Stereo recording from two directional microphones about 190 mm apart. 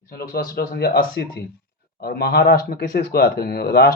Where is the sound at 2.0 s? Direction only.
55° left (ahead or behind).